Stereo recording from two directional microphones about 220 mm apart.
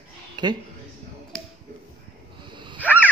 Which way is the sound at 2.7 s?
5° right (ahead or behind).